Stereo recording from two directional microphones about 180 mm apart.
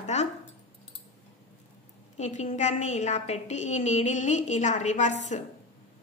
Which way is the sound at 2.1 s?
40° left (ahead or behind).